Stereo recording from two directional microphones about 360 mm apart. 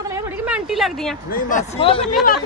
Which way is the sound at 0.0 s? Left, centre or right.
Centre.